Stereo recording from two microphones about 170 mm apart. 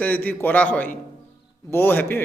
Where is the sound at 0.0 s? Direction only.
10° left (ahead or behind).